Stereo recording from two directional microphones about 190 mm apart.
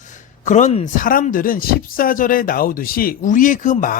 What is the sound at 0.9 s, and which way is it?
Speech, 45° left (ahead or behind).